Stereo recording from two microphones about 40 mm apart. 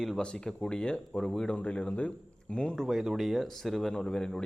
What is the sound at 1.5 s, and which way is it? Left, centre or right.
Speech, left.